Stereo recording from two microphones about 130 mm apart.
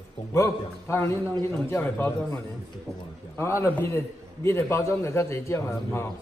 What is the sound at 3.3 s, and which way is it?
A man's voice, 20° left (ahead or behind).